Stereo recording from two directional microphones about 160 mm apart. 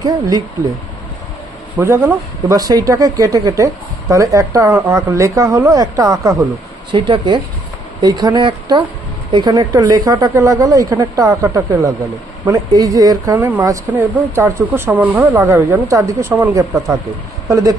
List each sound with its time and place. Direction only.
1.8 s speech: 15° right (ahead or behind)